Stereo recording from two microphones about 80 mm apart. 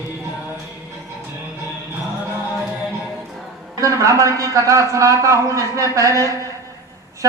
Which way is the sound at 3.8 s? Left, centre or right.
Right.